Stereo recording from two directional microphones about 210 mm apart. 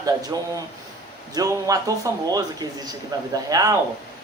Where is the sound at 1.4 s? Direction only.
15° right (ahead or behind).